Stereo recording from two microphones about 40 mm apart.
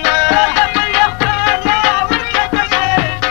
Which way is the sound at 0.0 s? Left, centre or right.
Centre.